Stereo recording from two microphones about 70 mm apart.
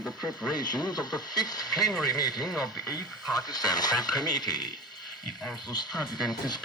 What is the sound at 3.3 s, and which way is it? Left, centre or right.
Speech, left.